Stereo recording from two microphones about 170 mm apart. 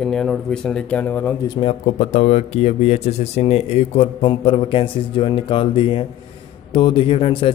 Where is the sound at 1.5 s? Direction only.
35° left (ahead or behind).